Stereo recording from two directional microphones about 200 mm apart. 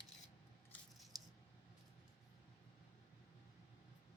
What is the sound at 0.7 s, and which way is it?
Scissors, centre (ahead or behind).